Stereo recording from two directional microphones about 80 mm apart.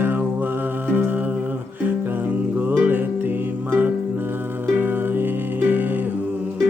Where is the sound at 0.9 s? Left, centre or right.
Right.